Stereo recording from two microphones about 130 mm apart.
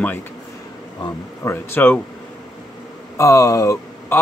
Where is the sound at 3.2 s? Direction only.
25° left (ahead or behind).